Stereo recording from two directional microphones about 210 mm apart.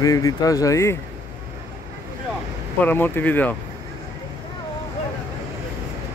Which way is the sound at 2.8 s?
10° left (ahead or behind).